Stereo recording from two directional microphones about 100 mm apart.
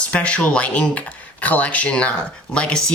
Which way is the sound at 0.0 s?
10° left (ahead or behind).